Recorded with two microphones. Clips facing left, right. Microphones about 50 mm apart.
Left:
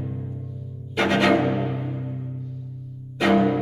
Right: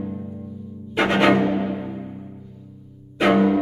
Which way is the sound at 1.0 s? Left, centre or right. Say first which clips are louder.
Right 2 dB; centre.